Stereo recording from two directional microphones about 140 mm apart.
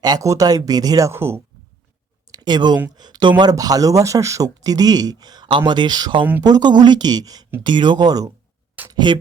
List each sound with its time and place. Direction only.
0.0 s speech: 25° right (ahead or behind)
2.3 s speech: 30° right (ahead or behind)